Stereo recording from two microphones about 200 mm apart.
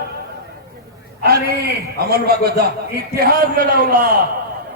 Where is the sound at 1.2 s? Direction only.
50° right (ahead or behind).